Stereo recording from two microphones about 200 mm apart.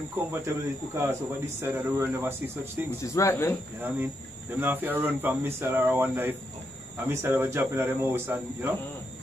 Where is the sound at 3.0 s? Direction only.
15° left (ahead or behind).